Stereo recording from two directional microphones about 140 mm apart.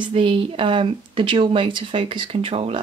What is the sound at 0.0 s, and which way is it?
Speech, 40° right (ahead or behind).